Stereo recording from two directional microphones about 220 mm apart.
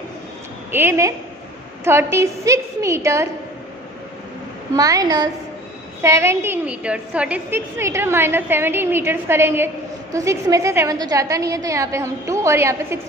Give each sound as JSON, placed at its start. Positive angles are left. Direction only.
{"t": 0.7, "sound": "a woman's voice", "side_deg": -10}
{"t": 4.7, "sound": "a woman's voice", "side_deg": -15}